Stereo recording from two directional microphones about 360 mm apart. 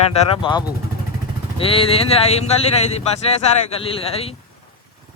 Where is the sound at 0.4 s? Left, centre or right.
Centre.